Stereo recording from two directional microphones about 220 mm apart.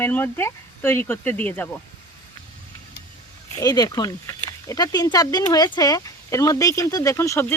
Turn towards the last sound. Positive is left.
turn(degrees=10)  # may be behind; listen again after turning